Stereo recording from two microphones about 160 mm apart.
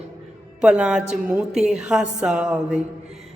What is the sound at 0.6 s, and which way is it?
A woman's voice, 5° right (ahead or behind).